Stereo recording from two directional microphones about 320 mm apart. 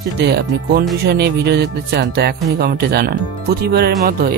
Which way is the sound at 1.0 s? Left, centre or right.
Right.